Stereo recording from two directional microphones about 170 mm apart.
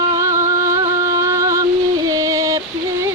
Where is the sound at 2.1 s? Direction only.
20° right (ahead or behind).